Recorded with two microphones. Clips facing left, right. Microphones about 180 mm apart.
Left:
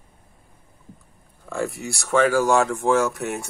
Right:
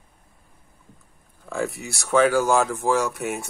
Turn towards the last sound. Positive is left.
turn(degrees=0)  # may be behind; listen again after turning